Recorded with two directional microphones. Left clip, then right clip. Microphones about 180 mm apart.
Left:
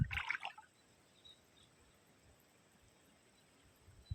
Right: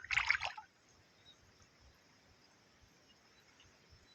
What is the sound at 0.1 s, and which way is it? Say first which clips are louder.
Water: right 9 dB; 55° right (ahead or behind).